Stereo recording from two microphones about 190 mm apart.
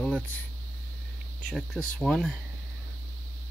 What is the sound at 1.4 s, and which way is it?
Speech, 5° left (ahead or behind).